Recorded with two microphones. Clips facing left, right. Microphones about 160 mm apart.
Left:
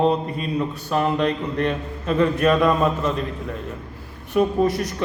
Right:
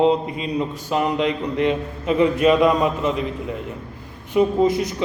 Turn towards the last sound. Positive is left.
turn(degrees=-10)  # may be behind; listen again after turning